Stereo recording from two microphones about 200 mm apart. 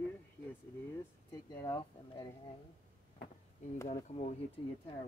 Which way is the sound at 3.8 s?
35° left (ahead or behind).